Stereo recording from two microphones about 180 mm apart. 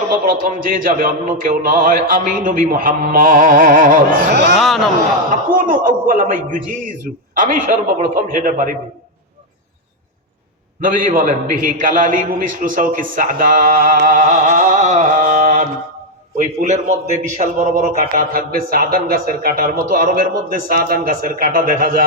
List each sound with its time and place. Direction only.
0.1 s a man's voice: 50° right (ahead or behind); by 4.5 s 70° right (ahead or behind)
4.5 s a man's voice: centre (ahead or behind)
5.5 s a man's voice: 50° right (ahead or behind)
10.8 s a man's voice: 50° right (ahead or behind)